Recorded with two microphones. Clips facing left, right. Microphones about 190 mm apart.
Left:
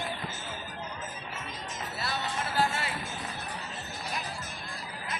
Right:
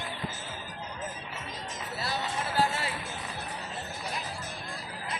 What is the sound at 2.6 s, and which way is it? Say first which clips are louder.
Music: right 1 dB; 35° right (ahead or behind).